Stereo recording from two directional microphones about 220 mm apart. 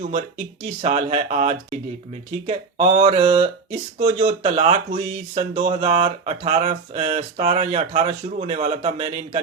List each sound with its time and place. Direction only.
0.1 s speech: 30° right (ahead or behind)